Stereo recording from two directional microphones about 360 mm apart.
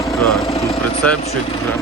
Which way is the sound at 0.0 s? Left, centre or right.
Centre.